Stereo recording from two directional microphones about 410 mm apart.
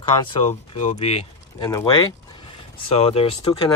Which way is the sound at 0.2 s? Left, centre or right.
Centre.